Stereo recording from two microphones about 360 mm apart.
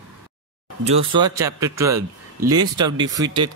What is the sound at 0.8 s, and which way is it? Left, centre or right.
Speech, centre.